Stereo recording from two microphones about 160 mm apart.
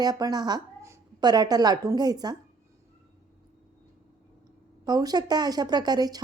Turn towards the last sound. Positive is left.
turn(degrees=-25)  # may be behind; listen again after turning